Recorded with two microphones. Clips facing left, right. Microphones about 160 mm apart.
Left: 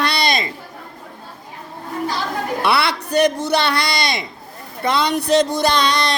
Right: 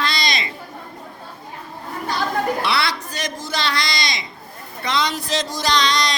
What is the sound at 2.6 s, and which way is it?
Speech, 60° left (ahead or behind).